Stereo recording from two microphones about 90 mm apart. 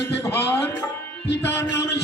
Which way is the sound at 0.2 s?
30° left (ahead or behind).